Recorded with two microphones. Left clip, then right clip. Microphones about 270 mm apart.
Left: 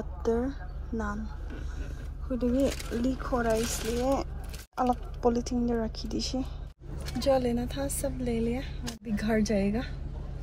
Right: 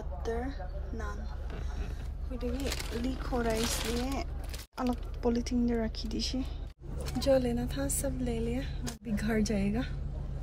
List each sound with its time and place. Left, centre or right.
0.2 s a woman's voice: centre
2.3 s a woman's voice: centre